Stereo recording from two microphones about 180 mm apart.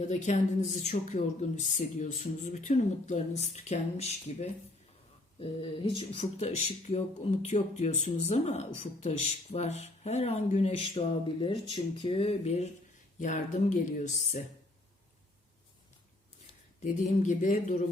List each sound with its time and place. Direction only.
0.1 s speech: 40° left (ahead or behind)
16.8 s speech: 45° left (ahead or behind)